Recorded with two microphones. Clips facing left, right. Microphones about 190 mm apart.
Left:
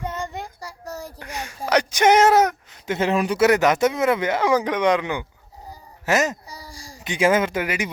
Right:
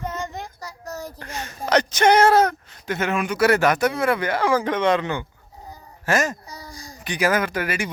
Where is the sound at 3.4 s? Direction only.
20° left (ahead or behind).